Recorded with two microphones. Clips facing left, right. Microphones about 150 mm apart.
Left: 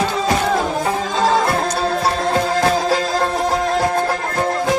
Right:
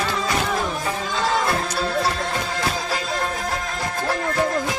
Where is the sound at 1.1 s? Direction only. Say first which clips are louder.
Left 6 dB; 35° left (ahead or behind).